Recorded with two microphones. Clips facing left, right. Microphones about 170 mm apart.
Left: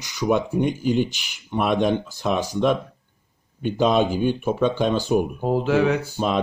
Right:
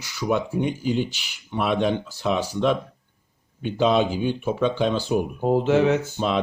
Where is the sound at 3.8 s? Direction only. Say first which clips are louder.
Left 1 dB; 10° left (ahead or behind).